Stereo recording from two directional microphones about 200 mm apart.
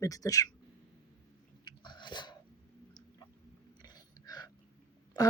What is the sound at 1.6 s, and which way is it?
Chewing, 20° left (ahead or behind).